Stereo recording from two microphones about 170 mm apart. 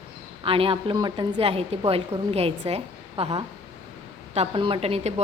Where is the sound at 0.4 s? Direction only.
30° right (ahead or behind).